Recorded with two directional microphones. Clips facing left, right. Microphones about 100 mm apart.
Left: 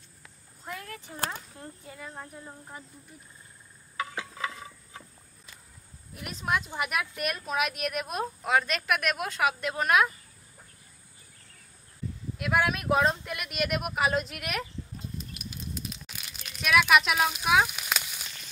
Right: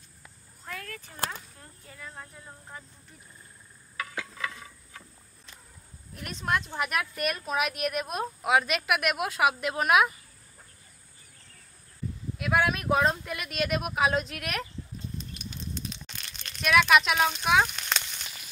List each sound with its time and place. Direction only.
0.7 s a sound: 20° left (ahead or behind)
1.6 s speech: 15° left (ahead or behind)
3.9 s stir: 25° left (ahead or behind)
6.1 s a woman's voice: 5° left (ahead or behind)
12.4 s a woman's voice: centre (ahead or behind)
15.1 s a sound: 5° left (ahead or behind)